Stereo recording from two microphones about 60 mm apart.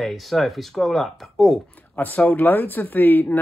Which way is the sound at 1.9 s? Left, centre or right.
Left.